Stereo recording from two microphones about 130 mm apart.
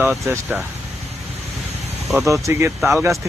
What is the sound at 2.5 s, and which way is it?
Speech, 20° right (ahead or behind).